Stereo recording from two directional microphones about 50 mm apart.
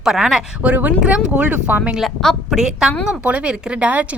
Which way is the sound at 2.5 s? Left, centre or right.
Centre.